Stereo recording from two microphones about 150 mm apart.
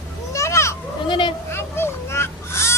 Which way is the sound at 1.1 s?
30° left (ahead or behind).